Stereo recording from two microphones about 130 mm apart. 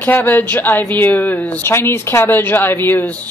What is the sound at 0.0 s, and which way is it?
A woman's voice, 15° left (ahead or behind).